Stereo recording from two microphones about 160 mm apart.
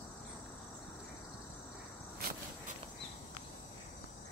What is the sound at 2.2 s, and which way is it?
Insect, 65° right (ahead or behind).